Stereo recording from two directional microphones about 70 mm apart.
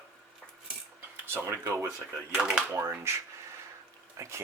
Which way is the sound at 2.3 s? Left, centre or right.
Centre.